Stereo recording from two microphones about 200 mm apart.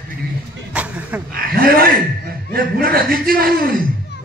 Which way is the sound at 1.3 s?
50° right (ahead or behind).